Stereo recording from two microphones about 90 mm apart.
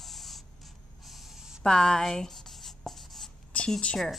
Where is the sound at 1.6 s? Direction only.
5° left (ahead or behind).